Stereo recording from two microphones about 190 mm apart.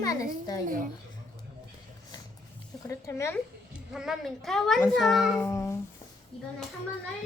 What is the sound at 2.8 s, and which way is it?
Speech, 15° left (ahead or behind).